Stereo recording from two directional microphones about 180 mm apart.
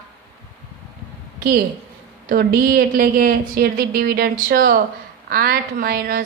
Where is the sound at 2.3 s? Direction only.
55° right (ahead or behind).